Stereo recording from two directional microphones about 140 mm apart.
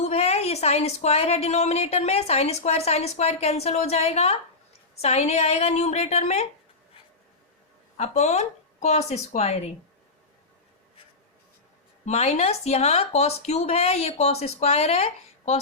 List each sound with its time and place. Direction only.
0.0 s a woman's voice: 50° left (ahead or behind)
7.9 s a woman's voice: 55° left (ahead or behind)
12.0 s a woman's voice: 50° left (ahead or behind)